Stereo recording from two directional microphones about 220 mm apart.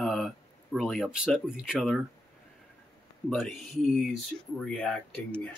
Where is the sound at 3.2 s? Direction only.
Centre (ahead or behind).